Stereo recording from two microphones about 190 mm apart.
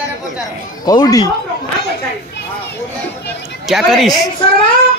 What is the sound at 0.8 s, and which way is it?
Speech, 20° left (ahead or behind).